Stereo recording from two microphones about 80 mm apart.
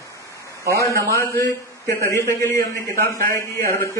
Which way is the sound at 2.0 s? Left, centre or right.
Left.